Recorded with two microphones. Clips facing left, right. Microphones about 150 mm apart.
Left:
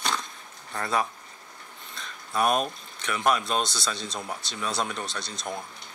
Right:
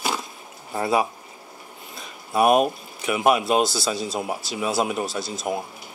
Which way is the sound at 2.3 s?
10° right (ahead or behind).